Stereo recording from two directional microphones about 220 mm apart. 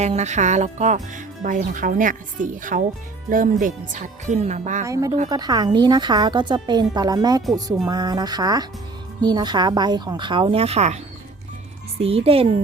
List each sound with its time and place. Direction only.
0.0 s speech: 30° right (ahead or behind)
4.9 s a woman's voice: 15° right (ahead or behind)